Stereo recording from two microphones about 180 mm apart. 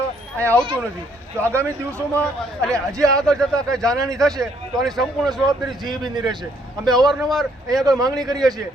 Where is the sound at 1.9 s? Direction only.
5° left (ahead or behind).